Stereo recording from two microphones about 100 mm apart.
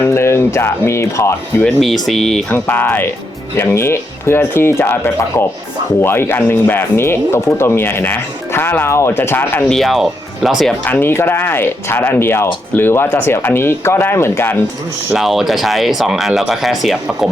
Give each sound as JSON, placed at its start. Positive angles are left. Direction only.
{"t": 0.0, "sound": "speech", "side_deg": 25}
{"t": 1.6, "sound": "speech", "side_deg": 0}
{"t": 2.5, "sound": "speech", "side_deg": 20}
{"t": 9.6, "sound": "speech", "side_deg": 0}
{"t": 10.8, "sound": "speech", "side_deg": 20}
{"t": 15.1, "sound": "speech", "side_deg": 0}